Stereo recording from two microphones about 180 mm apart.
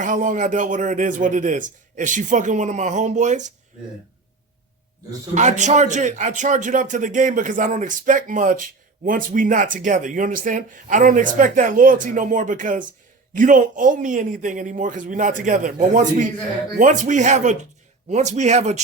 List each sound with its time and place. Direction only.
0.0 s a man's voice: 45° right (ahead or behind)
5.3 s a man's voice: 40° right (ahead or behind)